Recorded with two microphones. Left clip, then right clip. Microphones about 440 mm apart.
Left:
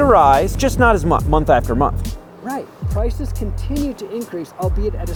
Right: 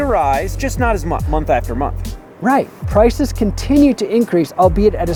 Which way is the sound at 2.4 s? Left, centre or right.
Right.